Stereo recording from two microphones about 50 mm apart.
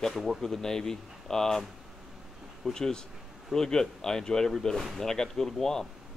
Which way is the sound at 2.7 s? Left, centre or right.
Centre.